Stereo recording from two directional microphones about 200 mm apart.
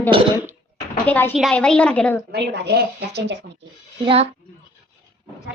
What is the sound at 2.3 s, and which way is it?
Speech, 55° right (ahead or behind).